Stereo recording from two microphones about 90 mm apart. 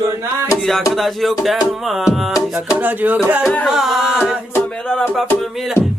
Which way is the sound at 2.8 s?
20° right (ahead or behind).